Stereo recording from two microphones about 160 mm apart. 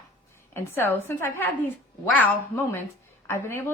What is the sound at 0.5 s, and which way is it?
A woman's voice, 15° left (ahead or behind).